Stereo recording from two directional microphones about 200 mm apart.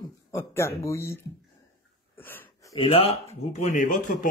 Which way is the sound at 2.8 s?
30° left (ahead or behind).